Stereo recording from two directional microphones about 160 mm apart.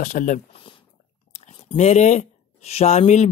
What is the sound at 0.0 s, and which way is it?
Speech, 50° left (ahead or behind).